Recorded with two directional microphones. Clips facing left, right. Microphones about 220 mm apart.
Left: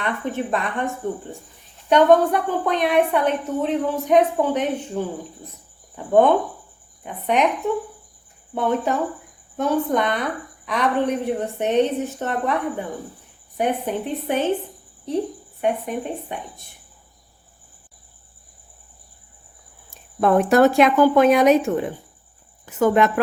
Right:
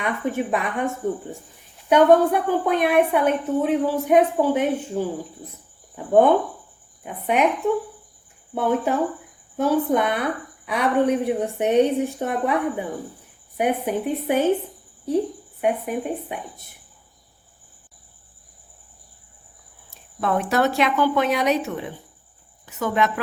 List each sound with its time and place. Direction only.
0.0 s a woman's voice: 10° right (ahead or behind)
1.9 s a woman's voice: 10° right (ahead or behind)
8.5 s a woman's voice: 5° right (ahead or behind)
15.6 s a woman's voice: 10° right (ahead or behind)
20.2 s a woman's voice: 50° left (ahead or behind)